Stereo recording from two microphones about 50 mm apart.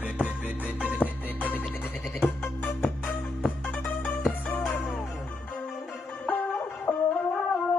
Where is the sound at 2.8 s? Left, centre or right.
Left.